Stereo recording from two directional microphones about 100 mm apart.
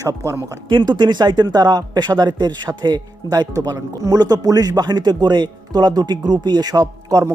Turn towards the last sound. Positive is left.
turn(degrees=-40)  # may be behind; listen again after turning